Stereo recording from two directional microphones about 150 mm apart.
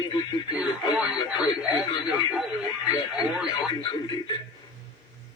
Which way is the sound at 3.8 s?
35° left (ahead or behind).